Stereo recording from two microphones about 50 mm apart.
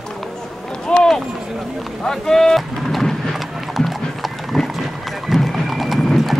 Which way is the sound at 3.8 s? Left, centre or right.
Centre.